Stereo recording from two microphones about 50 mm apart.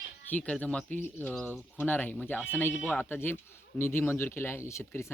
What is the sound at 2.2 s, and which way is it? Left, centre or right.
Speech, left.